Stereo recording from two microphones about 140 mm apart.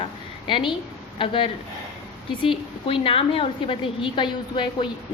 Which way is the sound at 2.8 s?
40° left (ahead or behind).